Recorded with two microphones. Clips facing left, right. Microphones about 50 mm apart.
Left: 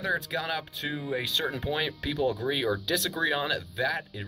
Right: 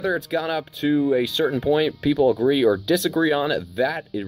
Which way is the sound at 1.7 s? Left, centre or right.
Centre.